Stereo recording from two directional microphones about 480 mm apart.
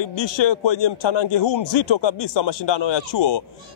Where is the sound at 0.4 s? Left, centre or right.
Left.